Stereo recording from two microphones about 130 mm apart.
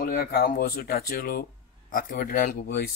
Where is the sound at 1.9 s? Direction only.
90° left.